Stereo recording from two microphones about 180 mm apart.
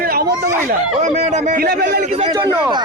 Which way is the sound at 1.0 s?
40° right (ahead or behind).